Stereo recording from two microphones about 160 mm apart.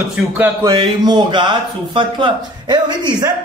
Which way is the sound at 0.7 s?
25° right (ahead or behind).